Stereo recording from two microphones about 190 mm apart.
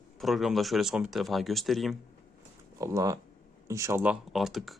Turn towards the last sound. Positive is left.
turn(degrees=0)  # may be behind; listen again after turning